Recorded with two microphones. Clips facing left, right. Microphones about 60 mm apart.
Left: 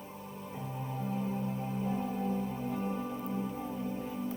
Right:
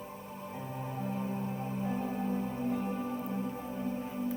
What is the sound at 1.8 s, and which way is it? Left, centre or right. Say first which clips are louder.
Music: even; right.